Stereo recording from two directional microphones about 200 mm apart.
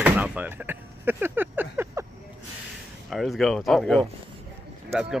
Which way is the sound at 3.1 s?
Centre (ahead or behind).